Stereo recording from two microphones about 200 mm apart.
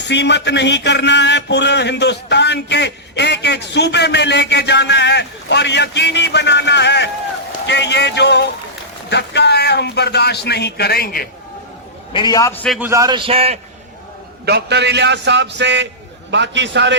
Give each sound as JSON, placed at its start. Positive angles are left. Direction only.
{"t": 0.0, "sound": "a man's voice", "side_deg": 60}
{"t": 12.1, "sound": "a man's voice", "side_deg": 20}
{"t": 12.6, "sound": "a man's voice", "side_deg": 0}
{"t": 12.9, "sound": "speech", "side_deg": -20}
{"t": 14.4, "sound": "a man's voice", "side_deg": -55}